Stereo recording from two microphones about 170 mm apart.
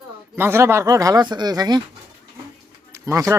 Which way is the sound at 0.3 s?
15° right (ahead or behind).